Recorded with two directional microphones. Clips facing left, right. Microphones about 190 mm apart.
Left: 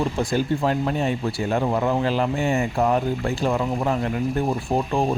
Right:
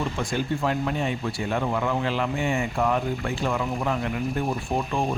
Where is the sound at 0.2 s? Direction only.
35° left (ahead or behind).